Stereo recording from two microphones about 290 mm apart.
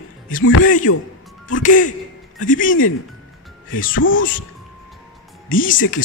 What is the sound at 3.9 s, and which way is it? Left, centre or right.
Speech, left.